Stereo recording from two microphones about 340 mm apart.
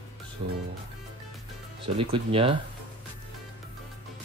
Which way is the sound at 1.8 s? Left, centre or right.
Centre.